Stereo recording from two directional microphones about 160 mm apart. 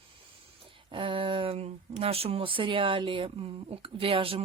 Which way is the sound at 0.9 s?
35° right (ahead or behind).